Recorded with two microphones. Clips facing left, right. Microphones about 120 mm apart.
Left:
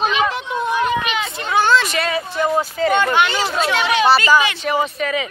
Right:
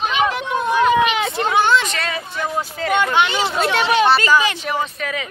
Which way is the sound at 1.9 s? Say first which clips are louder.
Left 4 dB; 5° left (ahead or behind).